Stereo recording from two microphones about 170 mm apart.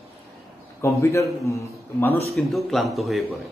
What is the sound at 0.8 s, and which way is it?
A man's voice, 15° left (ahead or behind).